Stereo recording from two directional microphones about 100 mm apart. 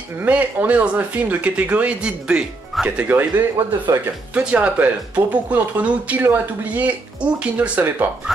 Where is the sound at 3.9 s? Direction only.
30° right (ahead or behind).